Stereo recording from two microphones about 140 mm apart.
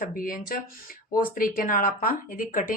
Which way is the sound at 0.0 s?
90° left.